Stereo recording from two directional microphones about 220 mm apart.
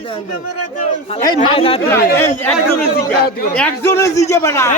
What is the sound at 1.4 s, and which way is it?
Speech, 25° left (ahead or behind).